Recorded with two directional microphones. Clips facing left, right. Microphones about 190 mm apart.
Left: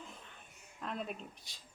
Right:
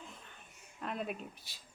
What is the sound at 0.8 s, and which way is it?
Speech, 5° right (ahead or behind).